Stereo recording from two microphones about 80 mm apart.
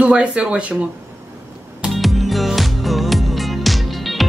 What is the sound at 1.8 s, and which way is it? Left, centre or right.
Music, centre.